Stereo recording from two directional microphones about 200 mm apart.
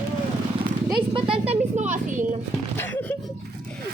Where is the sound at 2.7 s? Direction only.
10° left (ahead or behind).